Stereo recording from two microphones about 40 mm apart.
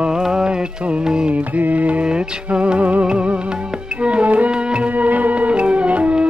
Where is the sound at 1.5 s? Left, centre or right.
Right.